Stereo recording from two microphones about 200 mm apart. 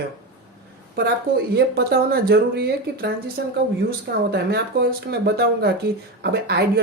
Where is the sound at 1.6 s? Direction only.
50° right (ahead or behind).